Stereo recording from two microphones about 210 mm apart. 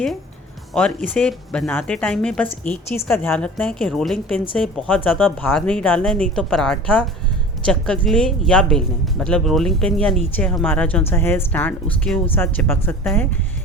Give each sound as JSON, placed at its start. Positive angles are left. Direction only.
{"t": 0.7, "sound": "speech", "side_deg": 5}